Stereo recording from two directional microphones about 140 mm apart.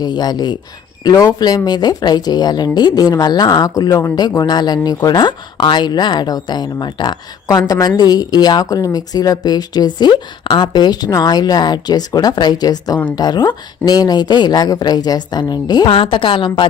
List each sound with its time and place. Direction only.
0.0 s speech: 30° left (ahead or behind)